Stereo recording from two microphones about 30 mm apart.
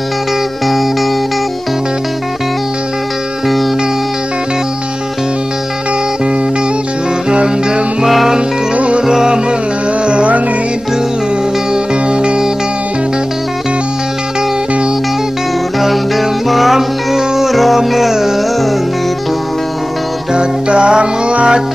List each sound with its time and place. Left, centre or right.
7.2 s music: right
8.0 s music: centre
8.7 s music: right
9.0 s music: right
10.0 s music: right
11.7 s music: right
15.8 s music: centre
20.3 s music: right